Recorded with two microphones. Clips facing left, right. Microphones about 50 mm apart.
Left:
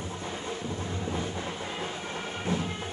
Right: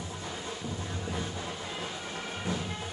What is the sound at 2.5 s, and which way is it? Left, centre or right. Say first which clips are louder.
Music: left 4 dB; left.